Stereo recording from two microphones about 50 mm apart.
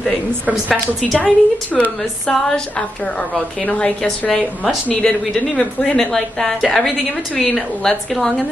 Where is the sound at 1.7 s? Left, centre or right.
Centre.